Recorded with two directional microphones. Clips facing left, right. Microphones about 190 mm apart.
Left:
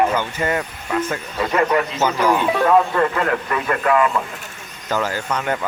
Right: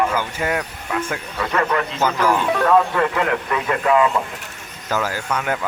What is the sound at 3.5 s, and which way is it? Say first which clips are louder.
A man's voice: right 1 dB; 15° right (ahead or behind).